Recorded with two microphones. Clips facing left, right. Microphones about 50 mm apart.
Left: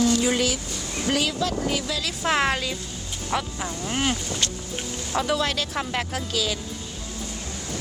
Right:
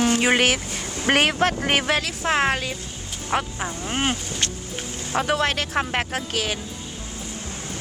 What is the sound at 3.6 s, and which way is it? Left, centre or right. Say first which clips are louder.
Speech: right 1 dB; right.